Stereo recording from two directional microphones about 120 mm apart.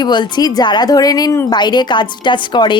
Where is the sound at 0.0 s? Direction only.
40° left (ahead or behind).